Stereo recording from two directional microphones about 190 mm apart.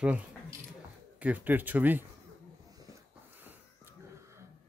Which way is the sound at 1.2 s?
10° right (ahead or behind).